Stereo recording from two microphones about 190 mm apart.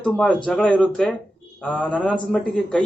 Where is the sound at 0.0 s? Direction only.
5° left (ahead or behind).